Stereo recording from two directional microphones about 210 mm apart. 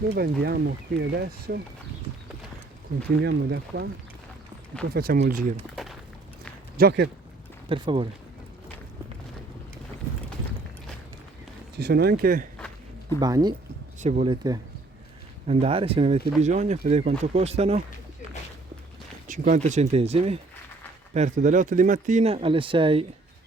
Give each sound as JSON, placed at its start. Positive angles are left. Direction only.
{"t": 0.1, "sound": "speech", "side_deg": -45}
{"t": 3.2, "sound": "speech", "side_deg": -50}
{"t": 4.9, "sound": "speech", "side_deg": -45}
{"t": 5.7, "sound": "a sound", "side_deg": 0}
{"t": 6.7, "sound": "speech", "side_deg": -50}
{"t": 7.7, "sound": "speech", "side_deg": -25}
{"t": 11.8, "sound": "speech", "side_deg": -50}
{"t": 13.1, "sound": "speech", "side_deg": -20}
{"t": 14.0, "sound": "speech", "side_deg": -35}
{"t": 15.4, "sound": "speech", "side_deg": -30}
{"t": 19.3, "sound": "speech", "side_deg": -35}